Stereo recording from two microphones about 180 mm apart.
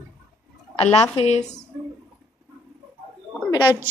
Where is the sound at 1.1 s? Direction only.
35° left (ahead or behind).